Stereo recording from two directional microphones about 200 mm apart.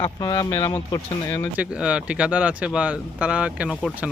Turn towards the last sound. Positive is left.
turn(degrees=0)  # may be behind; listen again after turning